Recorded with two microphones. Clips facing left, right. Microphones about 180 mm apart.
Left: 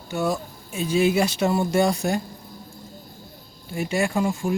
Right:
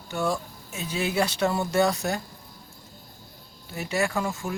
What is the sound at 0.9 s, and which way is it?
Speech, 10° left (ahead or behind).